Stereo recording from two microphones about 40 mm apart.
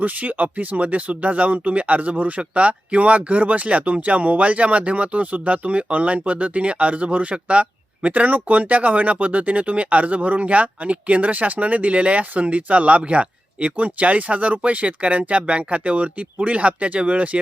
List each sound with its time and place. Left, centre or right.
0.0 s speech: right